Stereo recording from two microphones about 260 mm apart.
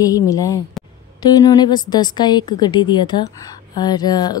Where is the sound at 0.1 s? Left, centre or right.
Centre.